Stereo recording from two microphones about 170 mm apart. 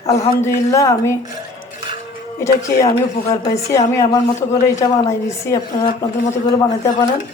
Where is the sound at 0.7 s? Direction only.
20° left (ahead or behind).